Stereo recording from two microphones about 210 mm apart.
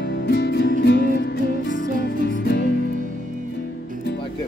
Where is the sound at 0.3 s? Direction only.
50° left (ahead or behind).